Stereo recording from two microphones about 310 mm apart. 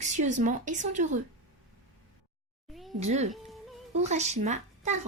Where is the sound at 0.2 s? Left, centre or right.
Right.